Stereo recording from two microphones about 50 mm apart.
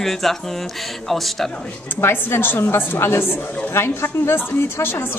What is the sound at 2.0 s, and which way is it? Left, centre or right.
A woman's voice, left.